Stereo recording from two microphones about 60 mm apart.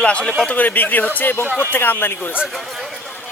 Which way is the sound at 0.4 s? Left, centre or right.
Left.